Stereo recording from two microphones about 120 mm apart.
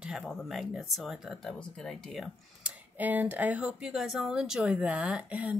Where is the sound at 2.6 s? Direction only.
15° right (ahead or behind).